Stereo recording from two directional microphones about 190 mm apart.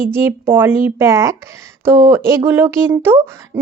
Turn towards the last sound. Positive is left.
turn(degrees=-10)  # may be behind; listen again after turning